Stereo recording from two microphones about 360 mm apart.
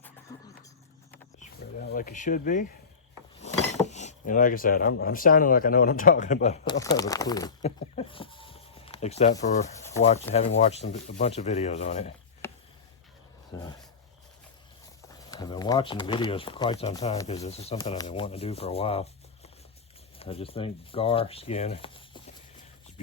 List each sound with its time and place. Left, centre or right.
0.3 s a sound: centre
1.9 s speech: left
3.8 s speech: centre
9.8 s rub: centre
10.3 s speech: centre
12.4 s a sound: centre
15.2 s speech: centre
20.1 s speech: centre